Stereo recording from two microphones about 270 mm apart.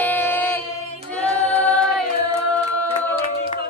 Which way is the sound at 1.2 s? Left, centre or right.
Centre.